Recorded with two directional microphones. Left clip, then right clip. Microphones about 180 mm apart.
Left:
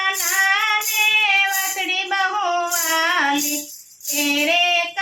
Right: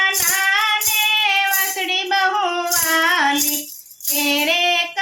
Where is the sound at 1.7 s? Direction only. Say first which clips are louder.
Right 2 dB; 30° right (ahead or behind).